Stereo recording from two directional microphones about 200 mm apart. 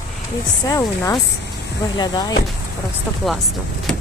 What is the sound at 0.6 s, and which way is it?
Speech, 20° left (ahead or behind).